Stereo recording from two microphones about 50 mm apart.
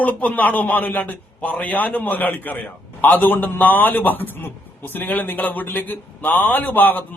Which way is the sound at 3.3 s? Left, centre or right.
Left.